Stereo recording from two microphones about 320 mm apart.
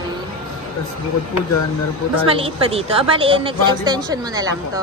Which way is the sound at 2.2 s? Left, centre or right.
Centre.